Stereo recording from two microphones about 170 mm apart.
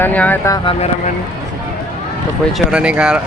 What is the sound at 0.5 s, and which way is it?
Speech, 30° left (ahead or behind).